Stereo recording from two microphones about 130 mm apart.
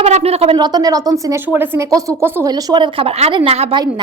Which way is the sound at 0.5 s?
30° right (ahead or behind).